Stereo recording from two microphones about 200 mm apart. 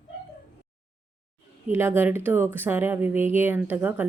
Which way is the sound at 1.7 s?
10° right (ahead or behind).